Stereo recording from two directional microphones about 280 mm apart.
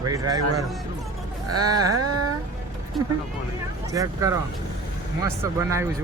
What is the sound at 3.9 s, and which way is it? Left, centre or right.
Speech, centre.